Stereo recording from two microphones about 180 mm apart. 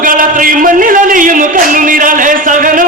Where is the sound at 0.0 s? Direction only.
50° right (ahead or behind).